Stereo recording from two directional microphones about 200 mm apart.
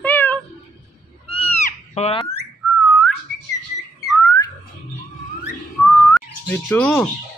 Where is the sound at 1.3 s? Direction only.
30° left (ahead or behind).